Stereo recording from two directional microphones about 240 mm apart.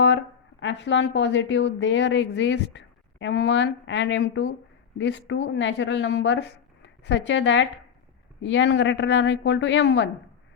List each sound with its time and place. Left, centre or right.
0.6 s a woman's voice: left